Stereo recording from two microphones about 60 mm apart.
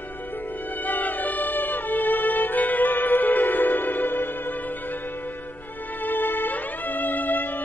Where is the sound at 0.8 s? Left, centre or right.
Left.